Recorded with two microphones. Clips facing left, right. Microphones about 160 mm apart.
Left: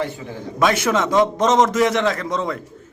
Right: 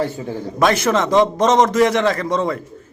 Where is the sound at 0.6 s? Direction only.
Centre (ahead or behind).